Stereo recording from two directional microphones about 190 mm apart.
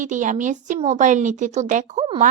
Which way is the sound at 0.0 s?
40° right (ahead or behind).